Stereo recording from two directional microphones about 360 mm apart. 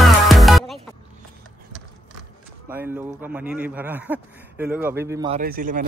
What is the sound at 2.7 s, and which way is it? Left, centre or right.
Speech, centre.